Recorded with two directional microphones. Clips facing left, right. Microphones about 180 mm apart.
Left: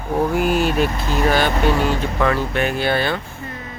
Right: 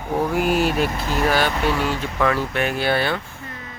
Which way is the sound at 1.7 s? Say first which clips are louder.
Left 3 dB; 40° left (ahead or behind).